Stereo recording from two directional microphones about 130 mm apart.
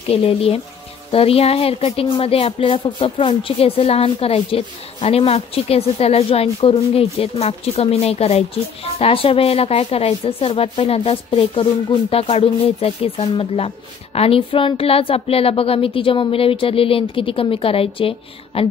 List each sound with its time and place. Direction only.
0.1 s speech: 45° left (ahead or behind)